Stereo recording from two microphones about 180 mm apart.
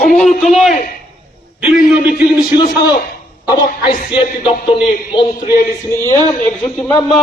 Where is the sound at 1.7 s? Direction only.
50° left (ahead or behind).